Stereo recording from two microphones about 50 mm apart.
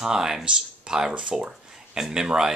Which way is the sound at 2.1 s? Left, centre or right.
Centre.